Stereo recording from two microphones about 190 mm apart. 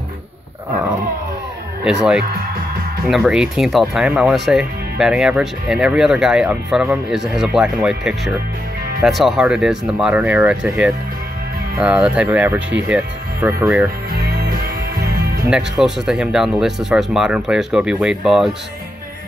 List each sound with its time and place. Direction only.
1.9 s speech: 5° right (ahead or behind)
14.1 s music: 55° right (ahead or behind)
15.4 s speech: 10° right (ahead or behind)